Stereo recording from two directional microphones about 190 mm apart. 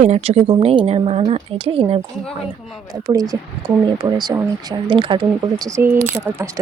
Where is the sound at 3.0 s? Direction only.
20° right (ahead or behind).